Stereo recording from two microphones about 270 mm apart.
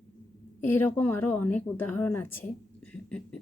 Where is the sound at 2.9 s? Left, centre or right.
Centre.